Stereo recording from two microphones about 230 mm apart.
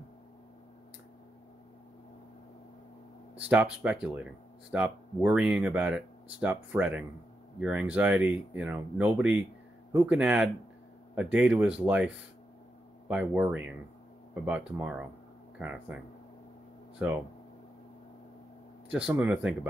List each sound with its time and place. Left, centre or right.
3.3 s speech: centre
13.1 s speech: centre
14.8 s speech: centre
17.0 s speech: centre
18.9 s speech: centre